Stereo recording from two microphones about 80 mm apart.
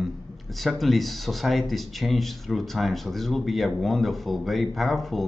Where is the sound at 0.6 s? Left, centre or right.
Centre.